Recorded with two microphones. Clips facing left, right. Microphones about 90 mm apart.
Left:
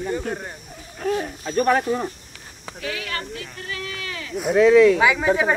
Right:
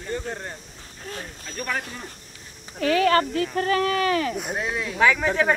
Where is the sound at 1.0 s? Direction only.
90° left.